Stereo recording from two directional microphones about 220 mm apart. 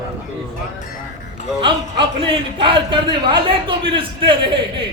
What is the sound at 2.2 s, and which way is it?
A man's voice, 25° right (ahead or behind).